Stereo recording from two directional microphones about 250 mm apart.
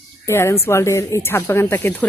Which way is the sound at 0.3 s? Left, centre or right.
Centre.